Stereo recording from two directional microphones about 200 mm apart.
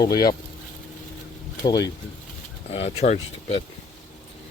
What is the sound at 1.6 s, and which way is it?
Speech, 20° left (ahead or behind).